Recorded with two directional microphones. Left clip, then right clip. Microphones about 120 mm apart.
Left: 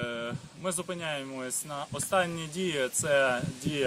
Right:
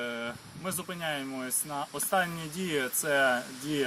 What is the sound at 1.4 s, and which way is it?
Speech, 50° left (ahead or behind).